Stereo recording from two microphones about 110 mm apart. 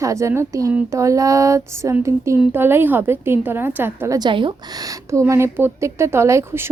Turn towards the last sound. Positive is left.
turn(degrees=-25)  # may be behind; listen again after turning